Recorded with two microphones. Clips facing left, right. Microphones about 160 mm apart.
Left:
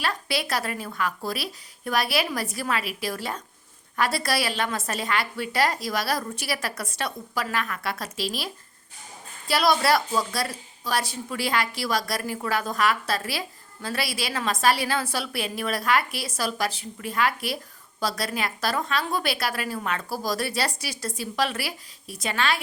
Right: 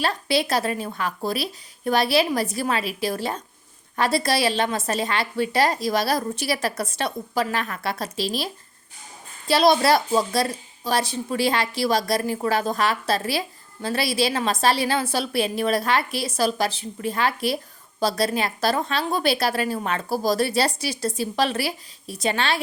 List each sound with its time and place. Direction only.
0.0 s a woman's voice: 25° right (ahead or behind)
9.5 s a woman's voice: 25° right (ahead or behind)